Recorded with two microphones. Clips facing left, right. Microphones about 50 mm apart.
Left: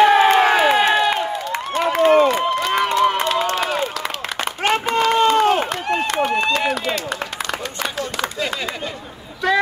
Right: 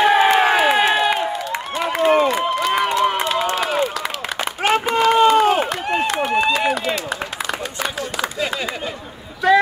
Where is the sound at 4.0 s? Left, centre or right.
Centre.